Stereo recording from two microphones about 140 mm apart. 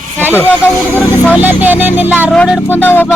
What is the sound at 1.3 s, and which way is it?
Speech, 10° right (ahead or behind).